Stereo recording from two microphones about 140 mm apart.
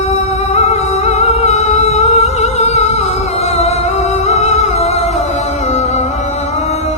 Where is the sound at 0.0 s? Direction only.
50° left (ahead or behind).